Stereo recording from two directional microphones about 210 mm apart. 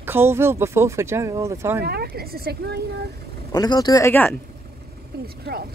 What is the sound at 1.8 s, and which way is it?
Speech, 50° right (ahead or behind).